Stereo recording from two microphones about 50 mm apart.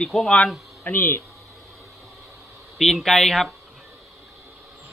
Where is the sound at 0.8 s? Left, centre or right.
Left.